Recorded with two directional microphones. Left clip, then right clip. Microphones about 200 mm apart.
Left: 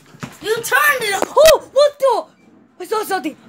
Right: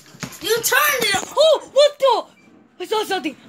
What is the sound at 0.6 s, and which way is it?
Speech, 50° left (ahead or behind).